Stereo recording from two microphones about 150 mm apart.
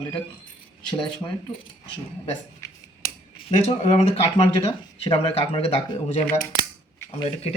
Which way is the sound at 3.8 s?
45° left (ahead or behind).